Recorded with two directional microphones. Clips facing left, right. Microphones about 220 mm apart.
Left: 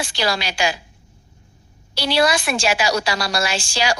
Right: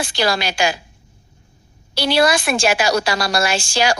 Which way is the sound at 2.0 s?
50° right (ahead or behind).